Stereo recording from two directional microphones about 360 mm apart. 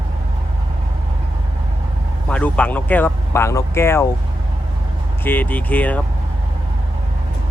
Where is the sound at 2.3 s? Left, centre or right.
Centre.